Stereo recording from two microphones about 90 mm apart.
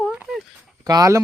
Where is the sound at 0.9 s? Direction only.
40° right (ahead or behind).